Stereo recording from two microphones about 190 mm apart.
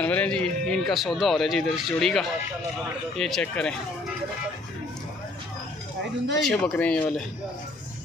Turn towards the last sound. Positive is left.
turn(degrees=10)  # may be behind; listen again after turning